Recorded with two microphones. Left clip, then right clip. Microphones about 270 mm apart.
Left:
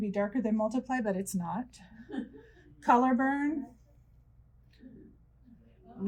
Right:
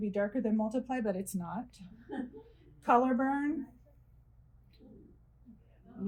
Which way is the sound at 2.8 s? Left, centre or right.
Left.